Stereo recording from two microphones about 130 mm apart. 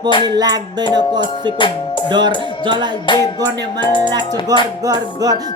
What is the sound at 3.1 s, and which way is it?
Music, 40° left (ahead or behind).